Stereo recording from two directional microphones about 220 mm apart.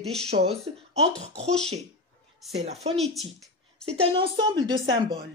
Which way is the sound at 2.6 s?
30° right (ahead or behind).